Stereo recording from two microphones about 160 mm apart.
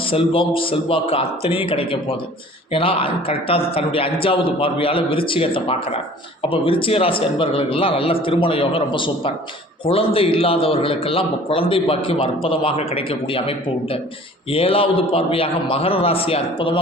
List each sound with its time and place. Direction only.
0.1 s a man's voice: 35° left (ahead or behind)